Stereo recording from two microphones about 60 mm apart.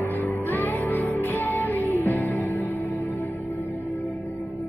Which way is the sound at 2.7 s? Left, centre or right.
Left.